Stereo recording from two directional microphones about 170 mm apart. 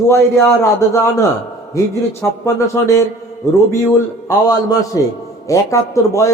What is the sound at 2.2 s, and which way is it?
A man's voice, 15° left (ahead or behind).